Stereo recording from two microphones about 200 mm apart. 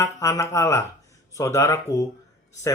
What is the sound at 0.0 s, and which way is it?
Speech, 15° left (ahead or behind).